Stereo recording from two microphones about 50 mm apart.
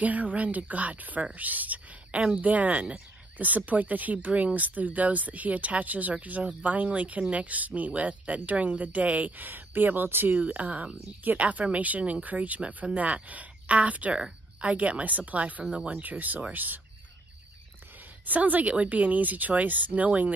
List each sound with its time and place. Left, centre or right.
0.0 s speech: right
10.4 s speech: right
15.7 s speech: right
16.0 s speech: right
18.2 s speech: right